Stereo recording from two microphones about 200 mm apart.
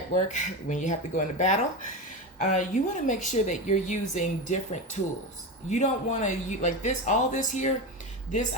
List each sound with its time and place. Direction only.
0.1 s speech: 40° left (ahead or behind)